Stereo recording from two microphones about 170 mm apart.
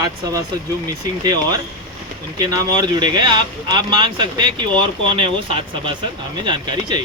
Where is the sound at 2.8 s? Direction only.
25° right (ahead or behind).